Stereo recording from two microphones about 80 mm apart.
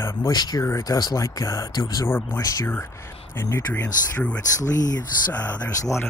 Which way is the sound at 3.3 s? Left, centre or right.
Left.